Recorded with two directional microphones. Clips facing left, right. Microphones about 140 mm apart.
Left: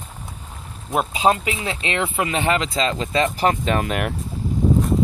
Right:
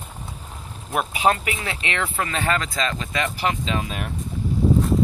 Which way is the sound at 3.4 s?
45° left (ahead or behind).